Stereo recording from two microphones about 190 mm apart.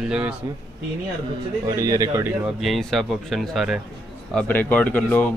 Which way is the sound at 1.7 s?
15° right (ahead or behind).